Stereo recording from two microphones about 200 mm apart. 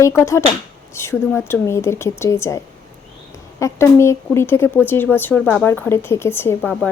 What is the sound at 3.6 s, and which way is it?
Speech, 15° left (ahead or behind).